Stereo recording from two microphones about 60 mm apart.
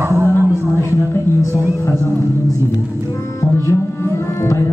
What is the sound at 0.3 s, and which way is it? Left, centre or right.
Music, left.